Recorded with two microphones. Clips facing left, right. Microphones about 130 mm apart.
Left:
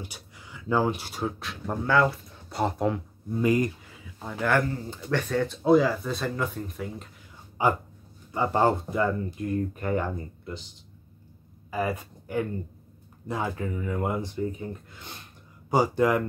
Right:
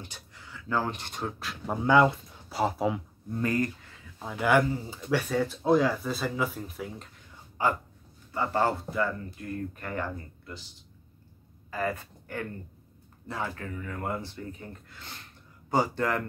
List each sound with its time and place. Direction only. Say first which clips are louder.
0.0 s speech: left 3 dB; 15° left (ahead or behind)
1.9 s speech: right 2 dB; 15° right (ahead or behind)
2.5 s speech: left 1 dB; centre (ahead or behind)
3.3 s speech: left 4 dB; 15° left (ahead or behind)
4.2 s speech: right 1 dB; 5° right (ahead or behind)
7.6 s a sound: left 3 dB; 15° left (ahead or behind)
8.3 s speech: left 4 dB; 20° left (ahead or behind)
11.7 s speech: left 3 dB; 15° left (ahead or behind)